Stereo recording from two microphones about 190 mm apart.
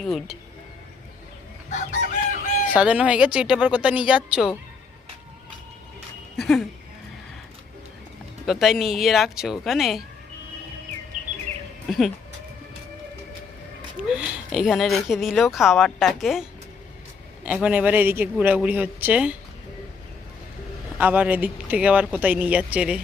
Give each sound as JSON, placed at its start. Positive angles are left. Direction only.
{"t": 0.0, "sound": "speech", "side_deg": 0}
{"t": 1.7, "sound": "chicken", "side_deg": 40}
{"t": 2.7, "sound": "a man's voice", "side_deg": -5}
{"t": 6.3, "sound": "speech", "side_deg": 0}
{"t": 8.4, "sound": "speech", "side_deg": 0}
{"t": 11.9, "sound": "speech", "side_deg": 0}
{"t": 14.1, "sound": "a man's voice", "side_deg": -5}
{"t": 21.0, "sound": "a man's voice", "side_deg": -10}